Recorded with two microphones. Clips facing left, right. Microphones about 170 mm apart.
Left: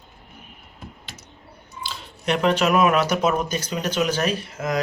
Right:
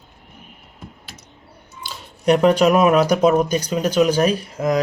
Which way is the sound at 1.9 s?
40° right (ahead or behind).